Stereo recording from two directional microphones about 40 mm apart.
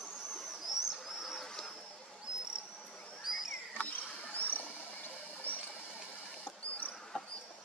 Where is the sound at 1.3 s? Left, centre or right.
Centre.